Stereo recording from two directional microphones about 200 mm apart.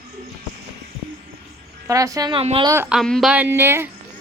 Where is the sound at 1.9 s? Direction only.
15° right (ahead or behind).